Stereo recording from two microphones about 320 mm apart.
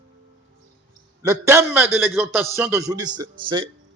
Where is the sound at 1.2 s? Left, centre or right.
Centre.